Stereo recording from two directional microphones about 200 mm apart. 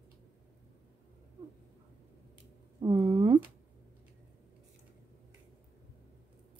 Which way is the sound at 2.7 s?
20° right (ahead or behind).